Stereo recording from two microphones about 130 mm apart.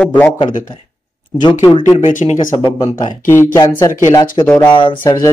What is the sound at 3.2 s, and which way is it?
Speech, 20° left (ahead or behind).